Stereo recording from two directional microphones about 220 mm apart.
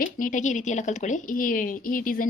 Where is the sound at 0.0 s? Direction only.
35° left (ahead or behind).